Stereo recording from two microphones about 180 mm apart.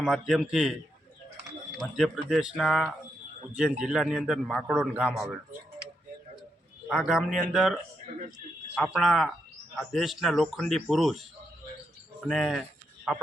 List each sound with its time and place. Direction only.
0.0 s a man's voice: centre (ahead or behind)
2.0 s a man's voice: centre (ahead or behind)
6.8 s a man's voice: 5° right (ahead or behind)
7.3 s speech: 45° right (ahead or behind)
7.5 s a man's voice: centre (ahead or behind)
12.2 s a man's voice: centre (ahead or behind)